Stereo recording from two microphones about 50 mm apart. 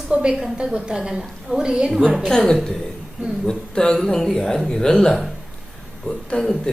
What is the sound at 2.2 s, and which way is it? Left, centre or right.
Speech, centre.